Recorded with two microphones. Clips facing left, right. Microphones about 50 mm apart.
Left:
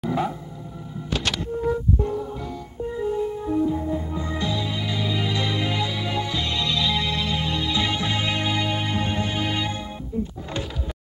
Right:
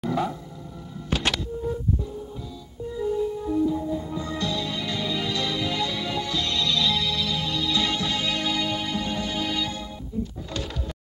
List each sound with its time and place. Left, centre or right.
0.1 s dog: centre
2.0 s music: left
2.9 s music: left
7.1 s music: left